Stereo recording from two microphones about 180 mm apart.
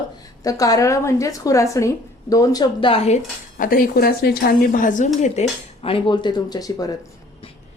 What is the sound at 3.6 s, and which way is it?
Speech, 55° left (ahead or behind).